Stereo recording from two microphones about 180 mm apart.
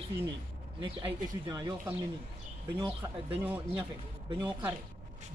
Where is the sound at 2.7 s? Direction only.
20° right (ahead or behind).